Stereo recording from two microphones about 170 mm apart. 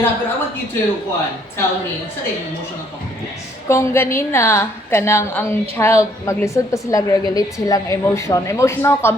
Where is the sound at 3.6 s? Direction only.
15° left (ahead or behind).